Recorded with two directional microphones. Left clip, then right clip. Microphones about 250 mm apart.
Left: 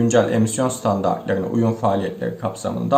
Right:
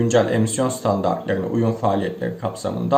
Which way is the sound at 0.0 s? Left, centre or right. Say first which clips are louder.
Left 1 dB; centre.